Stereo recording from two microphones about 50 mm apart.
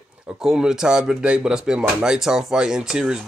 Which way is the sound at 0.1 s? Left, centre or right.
Centre.